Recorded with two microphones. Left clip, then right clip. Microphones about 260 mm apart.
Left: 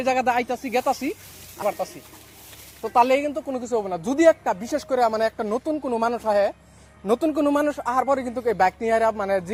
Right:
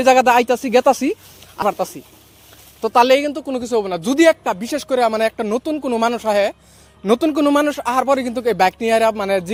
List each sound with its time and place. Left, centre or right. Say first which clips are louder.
0.0 s speech: right 9 dB; right